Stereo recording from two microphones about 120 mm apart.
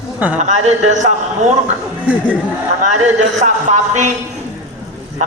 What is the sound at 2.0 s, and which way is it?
Speech, 10° right (ahead or behind).